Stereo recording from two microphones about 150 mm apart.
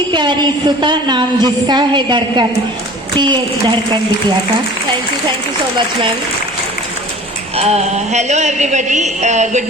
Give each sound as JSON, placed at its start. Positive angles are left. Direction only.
{"t": 0.1, "sound": "a woman's voice", "side_deg": -30}
{"t": 7.5, "sound": "a woman's voice", "side_deg": -45}